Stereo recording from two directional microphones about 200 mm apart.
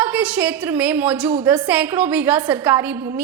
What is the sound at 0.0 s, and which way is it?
A woman's voice, 5° right (ahead or behind).